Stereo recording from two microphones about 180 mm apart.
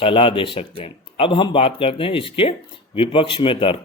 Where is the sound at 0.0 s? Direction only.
30° left (ahead or behind).